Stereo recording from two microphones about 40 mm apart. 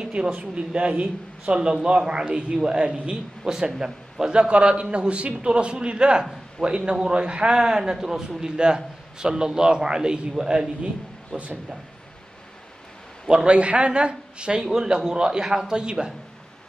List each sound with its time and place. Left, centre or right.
0.0 s speech: right
1.4 s a man's voice: right
11.3 s speech: centre
13.3 s a man's voice: right
14.7 s a man's voice: centre